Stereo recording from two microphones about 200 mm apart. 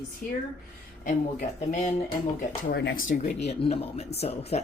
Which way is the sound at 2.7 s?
60° left (ahead or behind).